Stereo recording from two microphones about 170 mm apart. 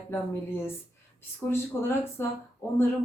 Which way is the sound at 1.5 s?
15° left (ahead or behind).